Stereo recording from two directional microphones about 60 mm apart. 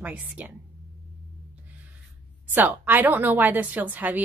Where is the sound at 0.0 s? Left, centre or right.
Right.